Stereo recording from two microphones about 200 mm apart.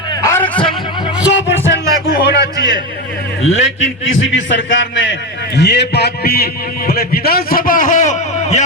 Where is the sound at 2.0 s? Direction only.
55° left (ahead or behind).